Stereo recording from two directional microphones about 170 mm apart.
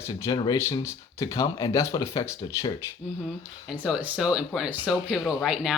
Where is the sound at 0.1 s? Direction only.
20° left (ahead or behind).